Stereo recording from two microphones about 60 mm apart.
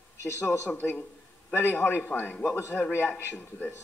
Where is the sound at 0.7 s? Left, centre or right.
Left.